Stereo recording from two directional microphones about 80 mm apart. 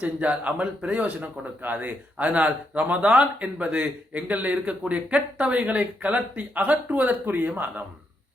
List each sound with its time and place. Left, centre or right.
0.0 s a man's voice: centre